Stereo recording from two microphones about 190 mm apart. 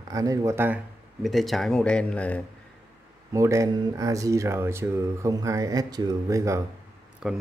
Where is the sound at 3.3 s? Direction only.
15° right (ahead or behind).